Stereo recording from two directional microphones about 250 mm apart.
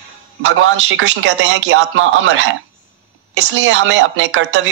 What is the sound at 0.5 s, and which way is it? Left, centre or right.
Speech, right.